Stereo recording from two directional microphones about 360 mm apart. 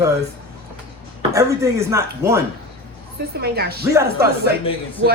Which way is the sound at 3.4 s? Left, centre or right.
Right.